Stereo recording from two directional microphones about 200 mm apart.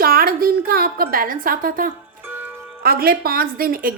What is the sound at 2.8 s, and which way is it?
Speech, 50° right (ahead or behind).